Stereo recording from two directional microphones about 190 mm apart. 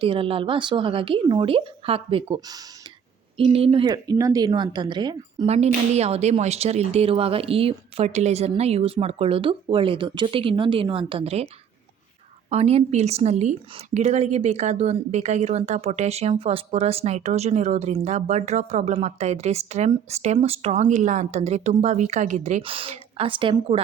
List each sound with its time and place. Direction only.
0.0 s speech: 30° right (ahead or behind)
5.5 s a woman's voice: 35° right (ahead or behind)
12.5 s a woman's voice: 35° right (ahead or behind)